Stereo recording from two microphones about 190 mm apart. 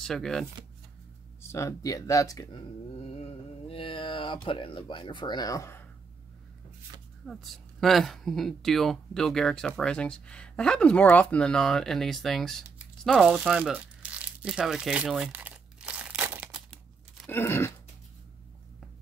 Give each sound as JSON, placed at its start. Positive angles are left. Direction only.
{"t": 0.0, "sound": "speech", "side_deg": 0}
{"t": 1.4, "sound": "speech", "side_deg": 15}
{"t": 3.0, "sound": "speech", "side_deg": 35}
{"t": 7.2, "sound": "speech", "side_deg": 0}
{"t": 13.0, "sound": "crumpling", "side_deg": 0}
{"t": 16.7, "sound": "tearing", "side_deg": 5}